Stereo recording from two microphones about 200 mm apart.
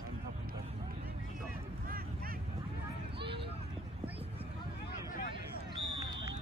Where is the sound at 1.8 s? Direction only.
45° right (ahead or behind).